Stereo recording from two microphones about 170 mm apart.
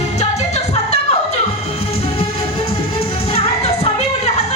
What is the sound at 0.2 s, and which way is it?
Music, 40° left (ahead or behind).